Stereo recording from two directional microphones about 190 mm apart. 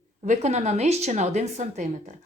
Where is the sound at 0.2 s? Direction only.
35° right (ahead or behind).